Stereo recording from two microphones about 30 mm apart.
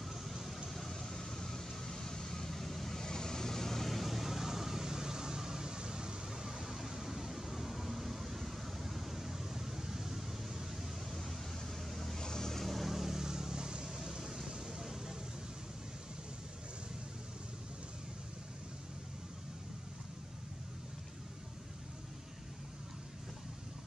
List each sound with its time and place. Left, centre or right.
0.0 s vehicle: centre
0.7 s vehicle: centre
2.5 s vehicle: centre
3.1 s vehicle: left
3.9 s vehicle: centre
6.9 s a sound: centre
11.2 s a sound: centre
12.2 s vehicle: centre
12.9 s vehicle: centre